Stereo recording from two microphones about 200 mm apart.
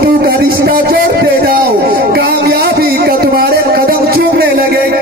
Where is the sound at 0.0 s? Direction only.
50° right (ahead or behind).